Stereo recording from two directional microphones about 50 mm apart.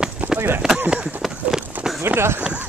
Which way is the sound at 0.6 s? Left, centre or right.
Centre.